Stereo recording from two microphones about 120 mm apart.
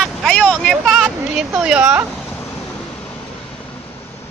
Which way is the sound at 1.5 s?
10° right (ahead or behind).